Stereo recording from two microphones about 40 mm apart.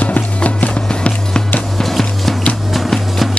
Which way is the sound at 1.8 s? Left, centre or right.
Centre.